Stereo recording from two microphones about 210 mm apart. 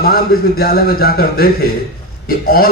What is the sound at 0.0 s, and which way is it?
A man's voice, 45° left (ahead or behind).